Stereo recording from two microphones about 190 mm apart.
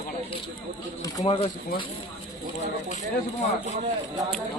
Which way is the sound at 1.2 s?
30° left (ahead or behind).